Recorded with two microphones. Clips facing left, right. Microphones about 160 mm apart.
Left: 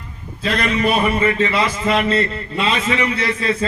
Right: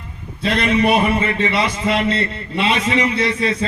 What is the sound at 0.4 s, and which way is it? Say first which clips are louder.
Speech: right 2 dB; 30° right (ahead or behind).